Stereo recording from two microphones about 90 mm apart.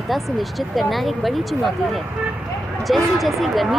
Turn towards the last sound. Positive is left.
turn(degrees=0)  # may be behind; listen again after turning